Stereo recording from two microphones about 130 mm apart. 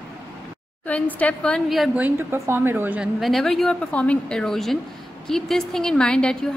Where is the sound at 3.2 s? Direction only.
Centre (ahead or behind).